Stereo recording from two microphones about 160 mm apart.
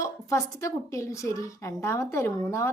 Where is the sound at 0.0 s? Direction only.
20° left (ahead or behind).